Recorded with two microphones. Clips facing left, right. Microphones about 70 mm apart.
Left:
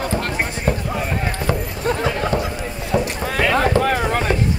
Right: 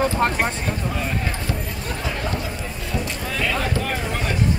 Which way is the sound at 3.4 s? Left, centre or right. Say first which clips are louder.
Left 8 dB; left.